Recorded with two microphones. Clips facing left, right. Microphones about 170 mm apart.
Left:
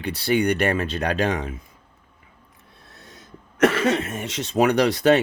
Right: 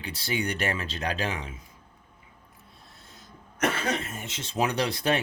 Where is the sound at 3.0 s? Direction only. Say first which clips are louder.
Left 7 dB; 70° left (ahead or behind).